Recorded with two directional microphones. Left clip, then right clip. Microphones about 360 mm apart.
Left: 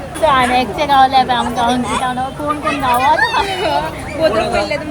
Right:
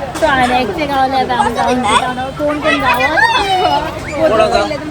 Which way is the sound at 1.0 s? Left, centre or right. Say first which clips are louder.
Left 3 dB; centre.